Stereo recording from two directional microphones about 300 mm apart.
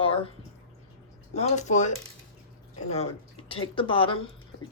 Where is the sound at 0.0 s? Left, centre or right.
Centre.